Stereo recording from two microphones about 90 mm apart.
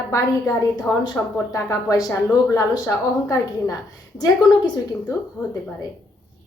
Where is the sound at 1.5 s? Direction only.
40° left (ahead or behind).